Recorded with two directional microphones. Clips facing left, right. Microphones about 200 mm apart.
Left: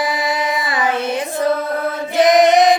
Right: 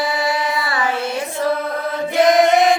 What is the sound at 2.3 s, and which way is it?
Music, 20° left (ahead or behind).